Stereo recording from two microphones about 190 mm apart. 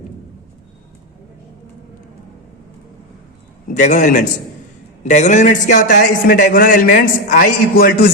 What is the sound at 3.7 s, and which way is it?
A man's voice, 40° left (ahead or behind).